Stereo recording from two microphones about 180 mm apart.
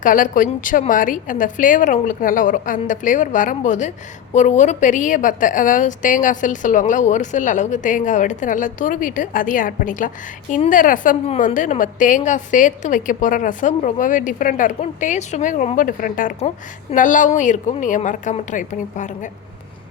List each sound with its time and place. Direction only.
0.0 s a woman's voice: 50° left (ahead or behind)